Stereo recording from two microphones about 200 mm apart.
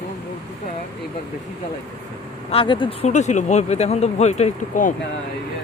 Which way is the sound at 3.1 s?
35° left (ahead or behind).